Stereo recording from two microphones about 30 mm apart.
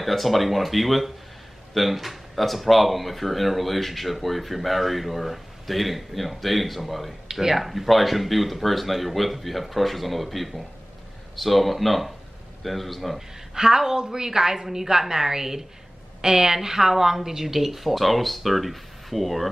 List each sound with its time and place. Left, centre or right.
0.0 s speech: centre
7.2 s speech: centre
13.6 s a woman's voice: centre
17.6 s speech: centre